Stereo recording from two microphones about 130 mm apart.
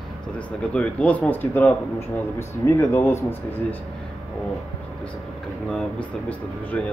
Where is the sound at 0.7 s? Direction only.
10° left (ahead or behind).